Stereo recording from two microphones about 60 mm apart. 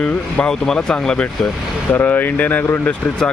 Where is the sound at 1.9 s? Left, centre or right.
Left.